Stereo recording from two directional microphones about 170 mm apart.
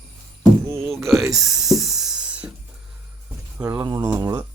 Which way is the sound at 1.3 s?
Centre (ahead or behind).